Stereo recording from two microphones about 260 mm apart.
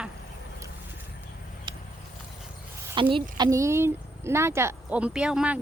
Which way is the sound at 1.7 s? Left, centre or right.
Centre.